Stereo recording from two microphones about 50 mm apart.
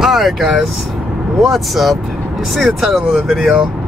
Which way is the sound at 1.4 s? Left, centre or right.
Centre.